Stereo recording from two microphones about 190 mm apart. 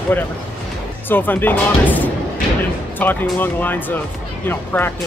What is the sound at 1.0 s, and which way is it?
Speech, 10° left (ahead or behind).